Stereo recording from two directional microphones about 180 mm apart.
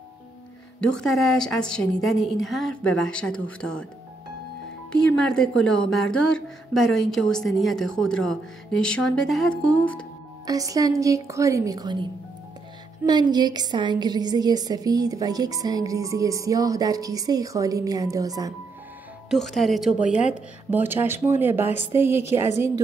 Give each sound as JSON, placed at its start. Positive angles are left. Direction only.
{"t": 0.7, "sound": "speech", "side_deg": 5}
{"t": 5.1, "sound": "speech", "side_deg": 5}
{"t": 10.4, "sound": "a woman's voice", "side_deg": -20}
{"t": 19.3, "sound": "speech", "side_deg": 0}
{"t": 20.1, "sound": "speech", "side_deg": 40}
{"t": 20.7, "sound": "a woman's voice", "side_deg": -10}